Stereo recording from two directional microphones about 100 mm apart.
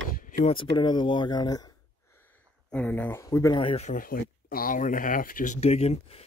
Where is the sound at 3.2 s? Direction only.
35° left (ahead or behind).